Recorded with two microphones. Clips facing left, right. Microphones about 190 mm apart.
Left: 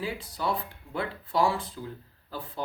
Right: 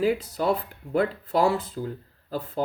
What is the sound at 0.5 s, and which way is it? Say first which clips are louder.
Speech: right 8 dB; 40° right (ahead or behind).